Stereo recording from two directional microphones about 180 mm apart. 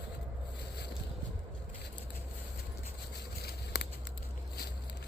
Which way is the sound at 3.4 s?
70° left (ahead or behind).